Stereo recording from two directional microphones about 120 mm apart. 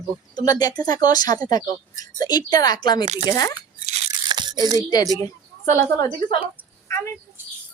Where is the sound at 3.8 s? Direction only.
65° right (ahead or behind).